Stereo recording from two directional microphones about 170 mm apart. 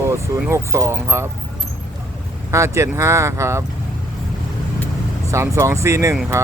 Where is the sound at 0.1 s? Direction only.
15° right (ahead or behind).